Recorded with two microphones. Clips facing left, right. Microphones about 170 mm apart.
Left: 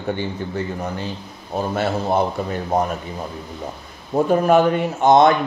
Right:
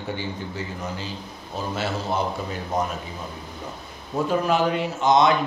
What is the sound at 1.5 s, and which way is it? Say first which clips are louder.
Speech: left 6 dB; 55° left (ahead or behind).